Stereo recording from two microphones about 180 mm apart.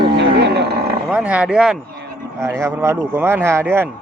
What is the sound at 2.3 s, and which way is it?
A man's voice, 15° right (ahead or behind).